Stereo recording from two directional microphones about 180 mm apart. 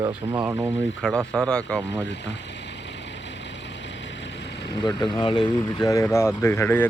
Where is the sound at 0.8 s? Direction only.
90° left.